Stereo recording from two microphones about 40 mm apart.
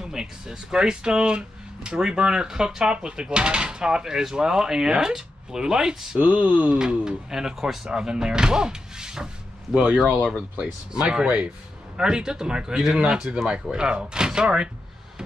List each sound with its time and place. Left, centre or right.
0.0 s speech: centre
6.1 s speech: right
6.8 s speech: centre
10.9 s speech: centre
11.2 s speech: right
12.0 s speech: centre